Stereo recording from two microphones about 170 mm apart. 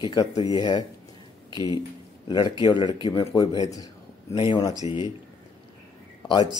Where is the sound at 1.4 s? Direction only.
25° left (ahead or behind).